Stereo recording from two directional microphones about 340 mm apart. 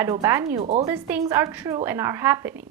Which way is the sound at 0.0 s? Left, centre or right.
Centre.